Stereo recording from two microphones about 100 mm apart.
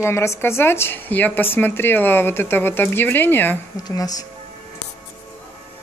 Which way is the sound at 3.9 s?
35° left (ahead or behind).